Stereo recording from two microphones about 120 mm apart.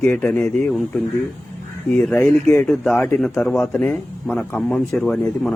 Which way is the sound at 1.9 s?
5° left (ahead or behind).